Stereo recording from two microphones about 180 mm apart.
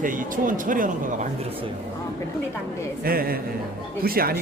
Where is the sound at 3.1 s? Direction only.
55° right (ahead or behind).